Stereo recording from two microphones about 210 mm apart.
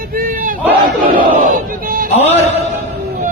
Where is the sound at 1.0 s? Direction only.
40° right (ahead or behind).